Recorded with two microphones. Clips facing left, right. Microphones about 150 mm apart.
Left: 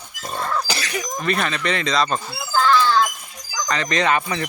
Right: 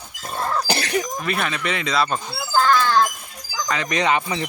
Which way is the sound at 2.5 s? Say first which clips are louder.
Left 1 dB; 40° right (ahead or behind).